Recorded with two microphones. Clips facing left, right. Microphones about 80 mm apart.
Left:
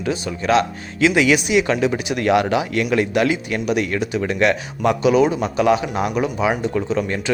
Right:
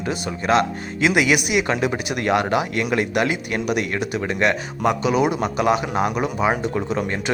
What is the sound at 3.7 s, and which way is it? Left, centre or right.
Speech, centre.